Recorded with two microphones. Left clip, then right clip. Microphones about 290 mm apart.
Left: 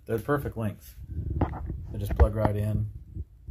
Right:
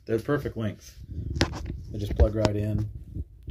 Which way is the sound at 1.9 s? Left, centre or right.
Centre.